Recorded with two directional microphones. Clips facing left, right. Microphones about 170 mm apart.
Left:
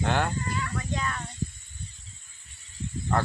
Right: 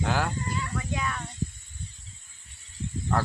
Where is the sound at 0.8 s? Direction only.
5° right (ahead or behind).